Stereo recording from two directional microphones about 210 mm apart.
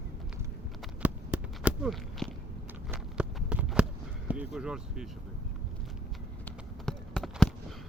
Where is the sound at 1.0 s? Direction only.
5° right (ahead or behind).